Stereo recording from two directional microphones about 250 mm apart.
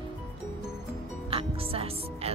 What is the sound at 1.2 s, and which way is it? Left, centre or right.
Music, right.